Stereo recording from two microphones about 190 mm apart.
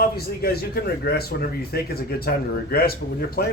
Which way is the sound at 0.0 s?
55° left (ahead or behind).